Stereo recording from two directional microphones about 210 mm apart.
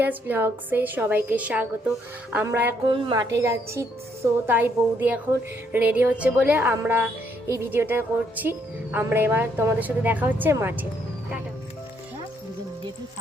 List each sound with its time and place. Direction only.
0.0 s speech: 10° right (ahead or behind)
2.8 s a woman's voice: 20° right (ahead or behind)